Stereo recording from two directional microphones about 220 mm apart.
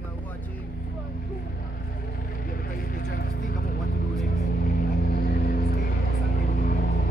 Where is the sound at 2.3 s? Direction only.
40° left (ahead or behind).